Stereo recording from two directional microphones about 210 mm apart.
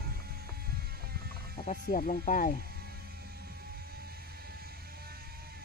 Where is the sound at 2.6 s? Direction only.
45° right (ahead or behind).